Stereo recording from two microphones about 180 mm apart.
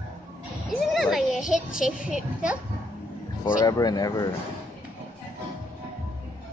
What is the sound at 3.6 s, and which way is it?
Speech, 20° left (ahead or behind).